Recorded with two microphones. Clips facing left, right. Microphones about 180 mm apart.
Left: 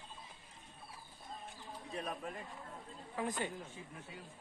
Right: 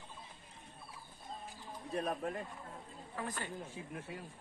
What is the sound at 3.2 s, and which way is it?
Speech, 15° left (ahead or behind).